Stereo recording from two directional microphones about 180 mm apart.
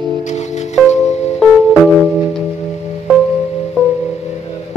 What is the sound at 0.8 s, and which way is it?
Music, 40° left (ahead or behind).